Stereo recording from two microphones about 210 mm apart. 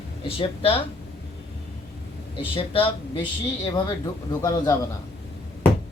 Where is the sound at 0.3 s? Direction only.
25° left (ahead or behind).